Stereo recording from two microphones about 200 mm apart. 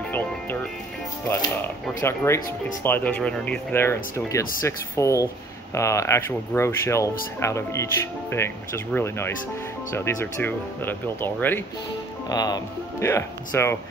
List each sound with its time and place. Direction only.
2.0 s speech: 15° left (ahead or behind)